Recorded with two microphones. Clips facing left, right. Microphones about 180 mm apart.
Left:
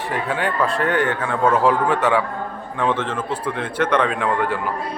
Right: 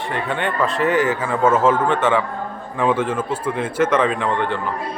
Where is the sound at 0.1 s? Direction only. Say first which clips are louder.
Even; centre (ahead or behind).